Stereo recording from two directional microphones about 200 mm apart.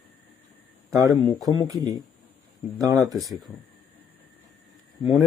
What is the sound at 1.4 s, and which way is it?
Speech, 15° right (ahead or behind).